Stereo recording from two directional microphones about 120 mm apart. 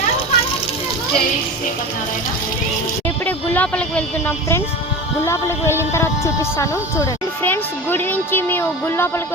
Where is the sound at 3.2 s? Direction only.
15° left (ahead or behind).